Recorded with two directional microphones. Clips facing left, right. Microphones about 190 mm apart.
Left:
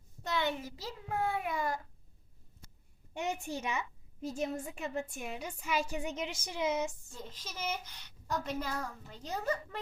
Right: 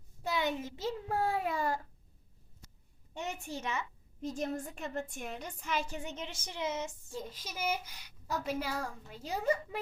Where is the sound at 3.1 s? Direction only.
15° left (ahead or behind).